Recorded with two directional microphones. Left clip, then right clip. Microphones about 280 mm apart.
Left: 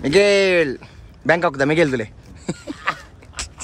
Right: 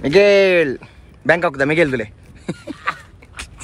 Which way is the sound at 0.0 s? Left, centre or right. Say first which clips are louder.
Right 3 dB; centre.